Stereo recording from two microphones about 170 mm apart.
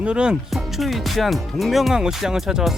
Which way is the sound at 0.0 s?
5° right (ahead or behind).